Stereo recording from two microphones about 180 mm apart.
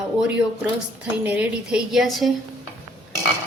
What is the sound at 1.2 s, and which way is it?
A woman's voice, 5° right (ahead or behind).